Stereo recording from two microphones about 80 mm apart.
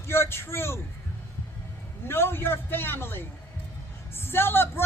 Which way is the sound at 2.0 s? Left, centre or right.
Left.